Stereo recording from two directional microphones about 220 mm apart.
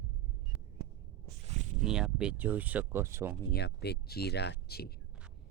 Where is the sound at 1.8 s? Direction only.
5° right (ahead or behind).